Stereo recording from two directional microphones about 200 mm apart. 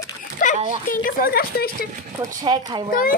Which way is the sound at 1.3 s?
50° left (ahead or behind).